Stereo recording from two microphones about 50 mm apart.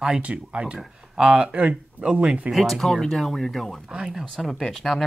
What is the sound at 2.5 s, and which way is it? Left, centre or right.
Speech, centre.